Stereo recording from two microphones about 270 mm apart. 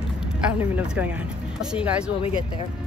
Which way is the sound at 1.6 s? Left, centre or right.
Centre.